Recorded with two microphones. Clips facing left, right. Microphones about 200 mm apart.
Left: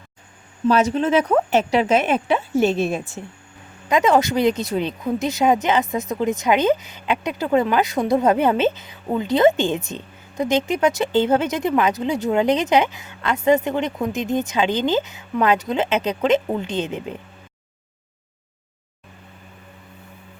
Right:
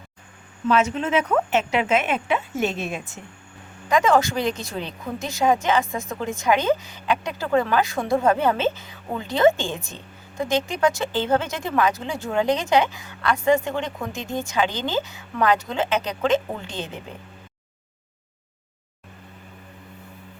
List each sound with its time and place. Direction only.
0.7 s speech: 35° left (ahead or behind)
3.8 s speech: 20° left (ahead or behind)